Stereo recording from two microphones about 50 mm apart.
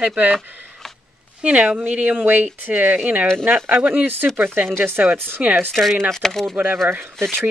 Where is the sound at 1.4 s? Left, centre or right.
Right.